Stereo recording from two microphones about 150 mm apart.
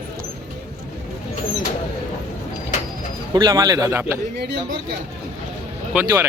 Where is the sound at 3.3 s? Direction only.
25° right (ahead or behind).